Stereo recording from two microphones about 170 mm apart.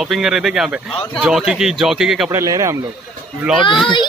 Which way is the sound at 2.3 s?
20° right (ahead or behind).